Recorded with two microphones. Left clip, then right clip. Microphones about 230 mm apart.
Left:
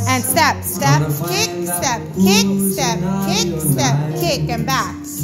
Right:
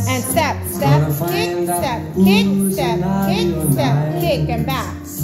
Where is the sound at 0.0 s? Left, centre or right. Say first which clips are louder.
Left 3 dB; left.